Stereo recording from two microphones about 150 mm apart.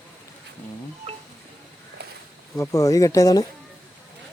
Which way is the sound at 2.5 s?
20° left (ahead or behind).